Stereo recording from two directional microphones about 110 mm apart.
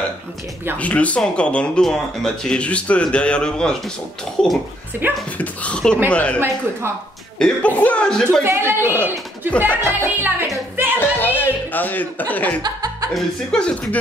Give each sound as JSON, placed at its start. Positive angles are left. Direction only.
{"t": 0.7, "sound": "speech", "side_deg": 10}
{"t": 4.9, "sound": "speech", "side_deg": -15}
{"t": 5.4, "sound": "speech", "side_deg": 10}
{"t": 8.5, "sound": "speech", "side_deg": -20}
{"t": 11.0, "sound": "speech", "side_deg": 20}
{"t": 12.6, "sound": "music", "side_deg": -40}
{"t": 13.1, "sound": "speech", "side_deg": 10}